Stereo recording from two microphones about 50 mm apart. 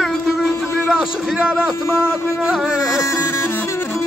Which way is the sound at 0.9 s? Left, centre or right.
Centre.